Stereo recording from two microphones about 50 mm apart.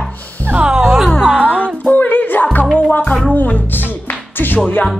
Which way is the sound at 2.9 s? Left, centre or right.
Left.